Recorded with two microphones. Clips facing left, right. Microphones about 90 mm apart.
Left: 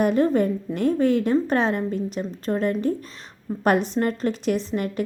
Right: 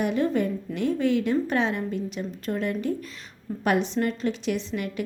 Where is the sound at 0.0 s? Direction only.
40° left (ahead or behind).